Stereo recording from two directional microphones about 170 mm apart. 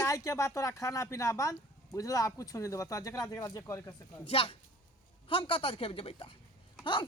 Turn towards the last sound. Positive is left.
turn(degrees=30)  # may be behind; listen again after turning